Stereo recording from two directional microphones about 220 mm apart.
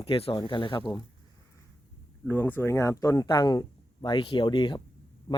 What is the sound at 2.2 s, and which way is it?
Speech, 10° left (ahead or behind).